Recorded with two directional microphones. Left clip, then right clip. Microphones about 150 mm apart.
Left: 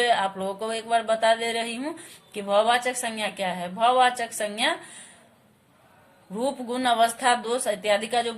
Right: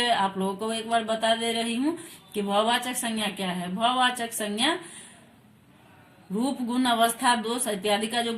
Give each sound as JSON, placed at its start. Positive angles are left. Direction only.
{"t": 0.0, "sound": "a woman's voice", "side_deg": 30}
{"t": 6.4, "sound": "a woman's voice", "side_deg": 25}